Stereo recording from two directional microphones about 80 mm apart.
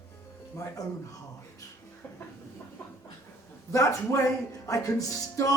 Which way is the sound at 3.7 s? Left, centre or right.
Left.